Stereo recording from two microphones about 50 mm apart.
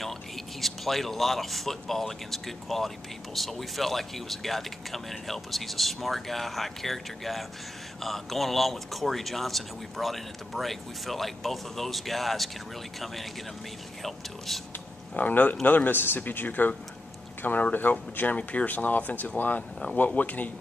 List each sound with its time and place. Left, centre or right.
0.0 s speech: centre
15.1 s speech: left